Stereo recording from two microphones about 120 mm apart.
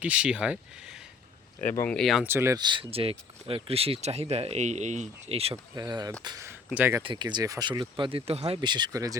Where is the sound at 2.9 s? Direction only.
50° right (ahead or behind).